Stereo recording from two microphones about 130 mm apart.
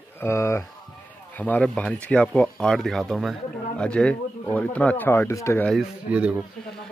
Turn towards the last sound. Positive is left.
turn(degrees=-10)  # may be behind; listen again after turning